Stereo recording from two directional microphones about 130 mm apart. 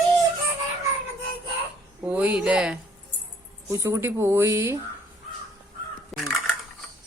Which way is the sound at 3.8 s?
20° right (ahead or behind).